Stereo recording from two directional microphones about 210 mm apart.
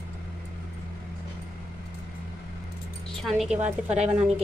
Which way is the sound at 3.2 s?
Centre (ahead or behind).